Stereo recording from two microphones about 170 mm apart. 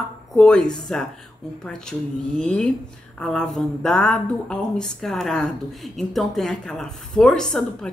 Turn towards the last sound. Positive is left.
turn(degrees=5)  # may be behind; listen again after turning